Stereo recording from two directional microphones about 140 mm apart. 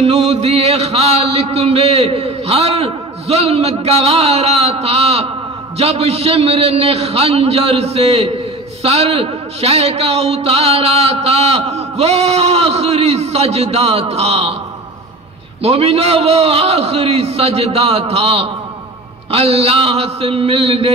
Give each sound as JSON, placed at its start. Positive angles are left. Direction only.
{"t": 0.0, "sound": "a man's voice", "side_deg": -50}
{"t": 15.6, "sound": "a man's voice", "side_deg": -45}